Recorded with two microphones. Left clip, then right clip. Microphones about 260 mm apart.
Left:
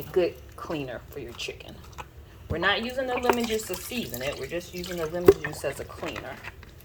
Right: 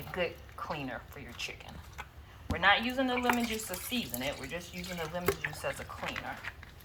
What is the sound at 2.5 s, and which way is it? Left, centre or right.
Speech, left.